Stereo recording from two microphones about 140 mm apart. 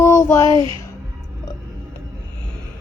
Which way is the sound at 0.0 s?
20° left (ahead or behind).